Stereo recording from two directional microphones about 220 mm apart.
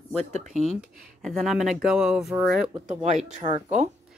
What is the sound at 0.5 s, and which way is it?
Speech, centre (ahead or behind).